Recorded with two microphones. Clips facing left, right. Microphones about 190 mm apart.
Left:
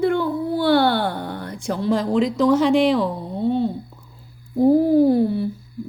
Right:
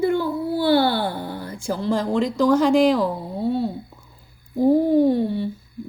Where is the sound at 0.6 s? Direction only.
50° left (ahead or behind).